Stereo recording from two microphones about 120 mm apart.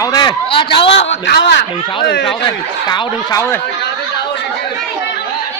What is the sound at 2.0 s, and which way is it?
Speech, 40° left (ahead or behind).